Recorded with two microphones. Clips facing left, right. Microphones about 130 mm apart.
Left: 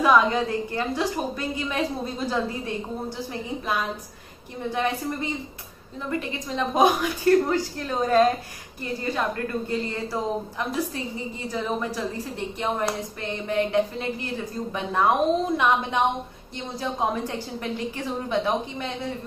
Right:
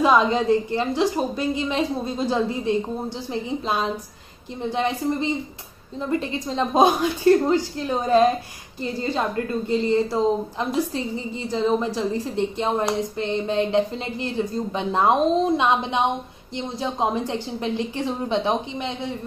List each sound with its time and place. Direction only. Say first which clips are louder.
0.0 s a woman's voice: right 2 dB; 25° right (ahead or behind)
11.5 s a woman's voice: right 6 dB; 25° right (ahead or behind)
17.0 s a woman's voice: right 3 dB; 25° right (ahead or behind)